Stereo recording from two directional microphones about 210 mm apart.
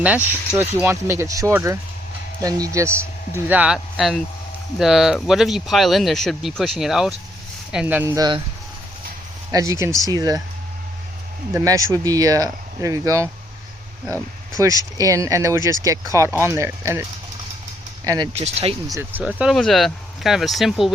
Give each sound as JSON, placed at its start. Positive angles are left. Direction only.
{"t": 0.0, "sound": "speech", "side_deg": -10}
{"t": 9.5, "sound": "speech", "side_deg": -15}
{"t": 11.5, "sound": "speech", "side_deg": -15}
{"t": 14.6, "sound": "speech", "side_deg": -15}
{"t": 18.3, "sound": "speech", "side_deg": -30}
{"t": 18.9, "sound": "speech", "side_deg": -10}